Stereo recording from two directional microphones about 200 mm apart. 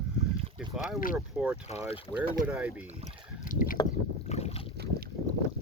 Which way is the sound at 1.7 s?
30° left (ahead or behind).